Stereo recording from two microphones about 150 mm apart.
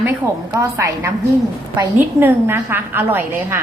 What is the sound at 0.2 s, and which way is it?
A woman's voice, 20° right (ahead or behind).